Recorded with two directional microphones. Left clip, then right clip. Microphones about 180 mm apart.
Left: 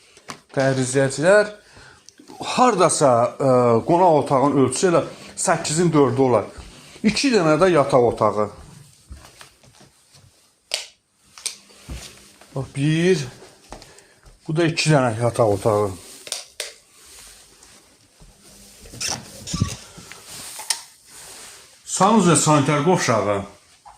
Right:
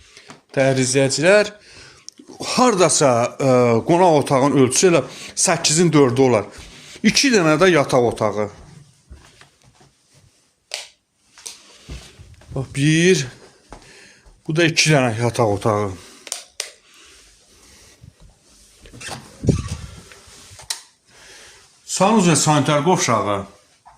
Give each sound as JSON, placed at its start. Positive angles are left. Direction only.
{"t": 0.5, "sound": "speech", "side_deg": -50}
{"t": 1.0, "sound": "speech", "side_deg": -40}
{"t": 2.5, "sound": "speech", "side_deg": -40}
{"t": 7.0, "sound": "speech", "side_deg": -35}
{"t": 10.7, "sound": "finger snapping", "side_deg": 20}
{"t": 12.5, "sound": "speech", "side_deg": -50}
{"t": 14.4, "sound": "speech", "side_deg": -35}
{"t": 16.3, "sound": "a sound", "side_deg": -5}
{"t": 21.9, "sound": "speech", "side_deg": -25}